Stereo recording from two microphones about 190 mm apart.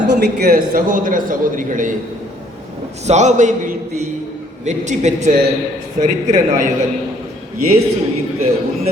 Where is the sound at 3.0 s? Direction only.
40° right (ahead or behind).